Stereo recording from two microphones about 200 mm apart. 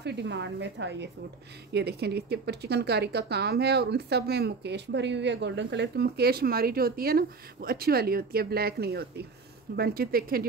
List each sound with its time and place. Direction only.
0.0 s speech: 60° right (ahead or behind)